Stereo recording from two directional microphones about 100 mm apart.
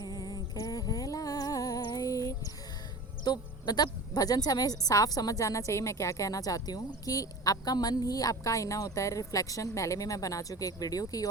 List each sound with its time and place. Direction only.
0.0 s humming: 40° left (ahead or behind)
3.2 s a woman's voice: 45° left (ahead or behind)